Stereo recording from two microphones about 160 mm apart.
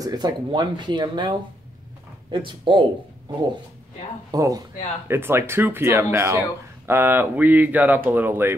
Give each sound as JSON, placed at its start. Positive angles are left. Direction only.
{"t": 0.0, "sound": "speech", "side_deg": -25}
{"t": 2.3, "sound": "speech", "side_deg": -30}
{"t": 4.3, "sound": "speech", "side_deg": -20}